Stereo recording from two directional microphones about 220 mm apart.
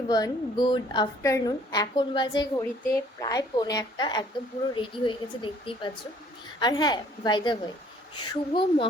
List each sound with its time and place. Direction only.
0.1 s a woman's voice: 20° left (ahead or behind)